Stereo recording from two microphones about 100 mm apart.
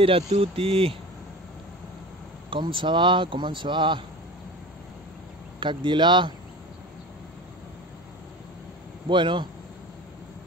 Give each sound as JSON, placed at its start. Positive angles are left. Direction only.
{"t": 0.0, "sound": "speech", "side_deg": -70}
{"t": 2.5, "sound": "speech", "side_deg": -60}
{"t": 5.6, "sound": "speech", "side_deg": -50}
{"t": 9.1, "sound": "speech", "side_deg": -55}